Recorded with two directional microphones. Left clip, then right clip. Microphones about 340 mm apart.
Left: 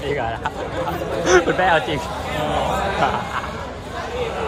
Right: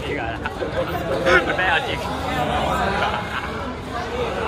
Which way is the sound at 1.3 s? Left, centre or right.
Centre.